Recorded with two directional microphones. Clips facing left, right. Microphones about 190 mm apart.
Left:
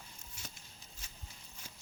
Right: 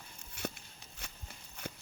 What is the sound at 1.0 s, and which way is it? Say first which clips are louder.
Walk: right 10 dB; 65° right (ahead or behind).